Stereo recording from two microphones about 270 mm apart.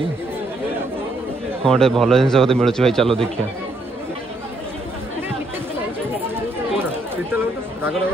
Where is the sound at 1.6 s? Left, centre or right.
Centre.